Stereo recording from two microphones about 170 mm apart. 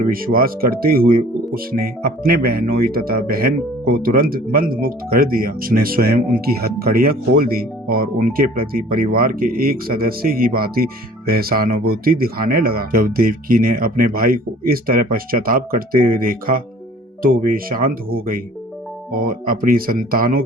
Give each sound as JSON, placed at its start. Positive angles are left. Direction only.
{"t": 0.0, "sound": "speech", "side_deg": -60}